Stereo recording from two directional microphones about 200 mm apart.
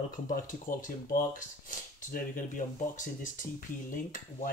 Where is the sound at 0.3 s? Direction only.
40° left (ahead or behind).